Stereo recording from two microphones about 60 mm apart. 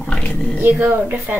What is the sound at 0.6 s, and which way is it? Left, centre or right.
Speech, right.